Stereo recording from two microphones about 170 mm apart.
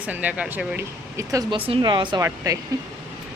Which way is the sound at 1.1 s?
20° right (ahead or behind).